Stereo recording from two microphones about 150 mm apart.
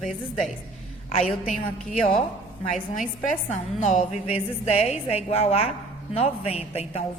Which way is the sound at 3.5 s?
55° left (ahead or behind).